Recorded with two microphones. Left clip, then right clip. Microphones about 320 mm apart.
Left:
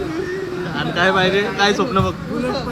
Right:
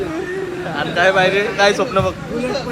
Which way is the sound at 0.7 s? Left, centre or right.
Centre.